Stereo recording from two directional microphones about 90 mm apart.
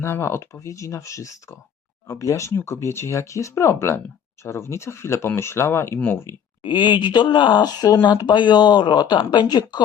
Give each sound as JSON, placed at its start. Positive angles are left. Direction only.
{"t": 0.0, "sound": "speech", "side_deg": 30}
{"t": 6.7, "sound": "speech", "side_deg": 55}